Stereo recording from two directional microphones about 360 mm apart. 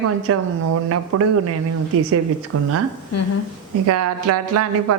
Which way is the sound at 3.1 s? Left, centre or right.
Left.